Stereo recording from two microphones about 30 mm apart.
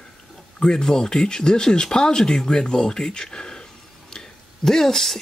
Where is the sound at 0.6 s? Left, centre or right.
Left.